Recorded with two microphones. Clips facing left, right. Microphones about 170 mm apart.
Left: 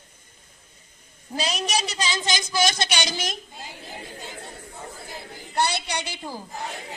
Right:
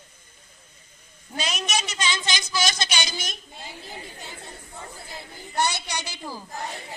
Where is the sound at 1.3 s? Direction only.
35° left (ahead or behind); by 3.4 s 90° left.